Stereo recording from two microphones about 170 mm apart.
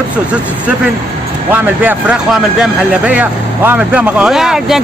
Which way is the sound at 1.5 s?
10° right (ahead or behind).